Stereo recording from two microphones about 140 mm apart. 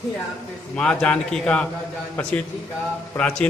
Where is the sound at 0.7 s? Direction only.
5° left (ahead or behind).